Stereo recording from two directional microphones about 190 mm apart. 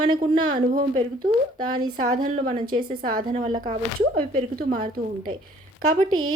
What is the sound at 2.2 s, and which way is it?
Speech, 45° right (ahead or behind).